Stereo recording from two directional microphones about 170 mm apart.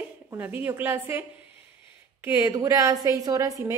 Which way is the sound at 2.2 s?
15° right (ahead or behind).